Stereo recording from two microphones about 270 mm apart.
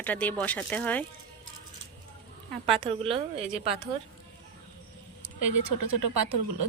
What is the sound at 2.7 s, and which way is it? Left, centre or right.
A woman's voice, right.